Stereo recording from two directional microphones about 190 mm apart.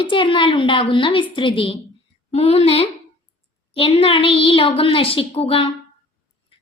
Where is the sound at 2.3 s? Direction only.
30° left (ahead or behind).